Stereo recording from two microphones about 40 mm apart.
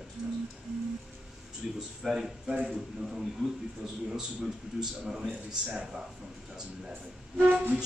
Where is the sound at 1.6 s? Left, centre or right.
Centre; by 5.8 s right.